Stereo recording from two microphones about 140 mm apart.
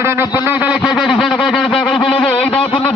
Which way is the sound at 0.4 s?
10° right (ahead or behind).